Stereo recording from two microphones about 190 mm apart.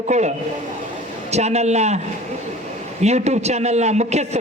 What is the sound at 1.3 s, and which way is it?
Speech, 35° right (ahead or behind).